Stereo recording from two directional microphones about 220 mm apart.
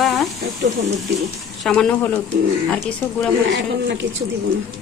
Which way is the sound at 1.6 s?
5° left (ahead or behind).